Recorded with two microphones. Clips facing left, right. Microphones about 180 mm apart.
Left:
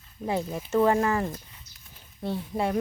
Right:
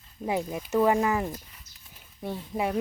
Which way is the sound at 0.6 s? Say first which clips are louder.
Left 1 dB; 5° right (ahead or behind).